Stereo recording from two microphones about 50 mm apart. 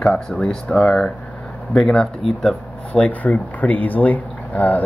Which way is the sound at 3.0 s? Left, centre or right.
Left.